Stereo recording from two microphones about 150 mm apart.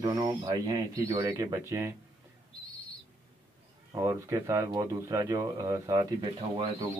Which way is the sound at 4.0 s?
20° right (ahead or behind).